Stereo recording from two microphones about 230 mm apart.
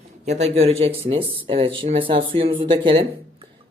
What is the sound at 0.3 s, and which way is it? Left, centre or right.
Speech, right.